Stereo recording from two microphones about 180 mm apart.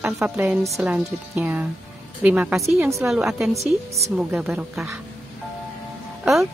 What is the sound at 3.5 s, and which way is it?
Speech, 35° right (ahead or behind).